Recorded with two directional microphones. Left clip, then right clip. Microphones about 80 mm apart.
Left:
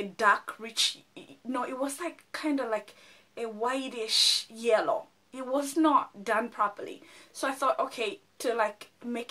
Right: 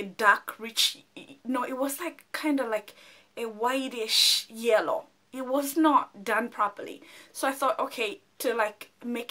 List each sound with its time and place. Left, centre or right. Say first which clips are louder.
0.1 s speech: right 3 dB; centre